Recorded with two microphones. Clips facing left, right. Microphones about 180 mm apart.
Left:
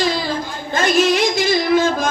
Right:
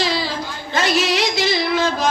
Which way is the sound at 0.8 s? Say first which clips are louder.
Left 3 dB; 50° left (ahead or behind).